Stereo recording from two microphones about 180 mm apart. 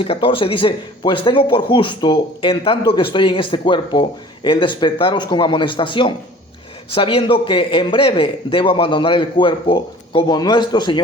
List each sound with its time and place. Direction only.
0.0 s a man's voice: 30° left (ahead or behind)